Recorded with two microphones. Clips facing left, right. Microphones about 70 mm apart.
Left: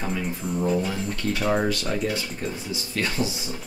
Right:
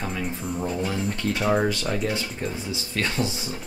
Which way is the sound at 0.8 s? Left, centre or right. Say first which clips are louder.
Right 1 dB; centre.